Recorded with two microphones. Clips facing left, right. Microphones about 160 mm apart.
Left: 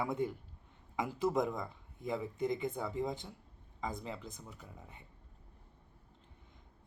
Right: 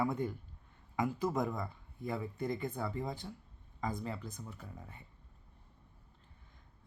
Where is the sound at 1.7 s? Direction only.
20° left (ahead or behind).